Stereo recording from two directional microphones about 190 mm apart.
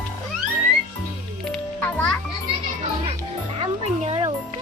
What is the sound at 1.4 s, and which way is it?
Music, 5° left (ahead or behind).